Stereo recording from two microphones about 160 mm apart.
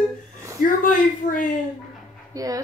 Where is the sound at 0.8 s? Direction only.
55° left (ahead or behind).